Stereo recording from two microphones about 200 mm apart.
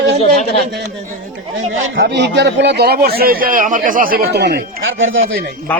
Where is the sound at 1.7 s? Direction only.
70° right (ahead or behind); by 4.8 s 50° right (ahead or behind).